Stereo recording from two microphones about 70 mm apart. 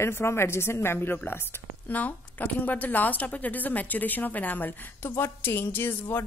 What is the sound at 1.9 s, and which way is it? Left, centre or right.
Speech, left.